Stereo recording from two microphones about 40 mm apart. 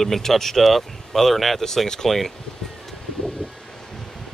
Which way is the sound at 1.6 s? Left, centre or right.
Centre.